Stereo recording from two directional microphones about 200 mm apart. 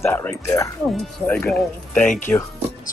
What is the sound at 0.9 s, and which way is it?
Speech, centre (ahead or behind).